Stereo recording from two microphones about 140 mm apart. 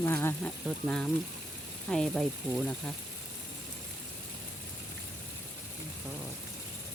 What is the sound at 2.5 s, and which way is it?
Speech, 15° right (ahead or behind).